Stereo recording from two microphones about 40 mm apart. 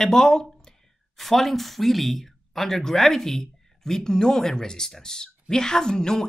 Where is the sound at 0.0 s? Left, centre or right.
Centre.